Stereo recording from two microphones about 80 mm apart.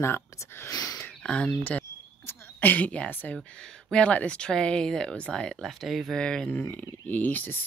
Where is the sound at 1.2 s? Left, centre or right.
Centre.